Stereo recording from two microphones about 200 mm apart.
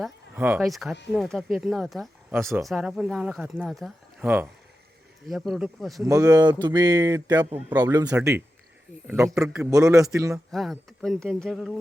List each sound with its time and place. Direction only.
0.0 s speech: 10° right (ahead or behind)
6.1 s a man's voice: 15° right (ahead or behind)
10.5 s speech: centre (ahead or behind)